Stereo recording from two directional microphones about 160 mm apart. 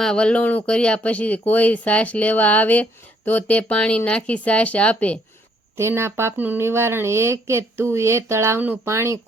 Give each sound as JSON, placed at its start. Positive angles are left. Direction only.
{"t": 0.0, "sound": "speech", "side_deg": 5}
{"t": 5.7, "sound": "speech", "side_deg": -15}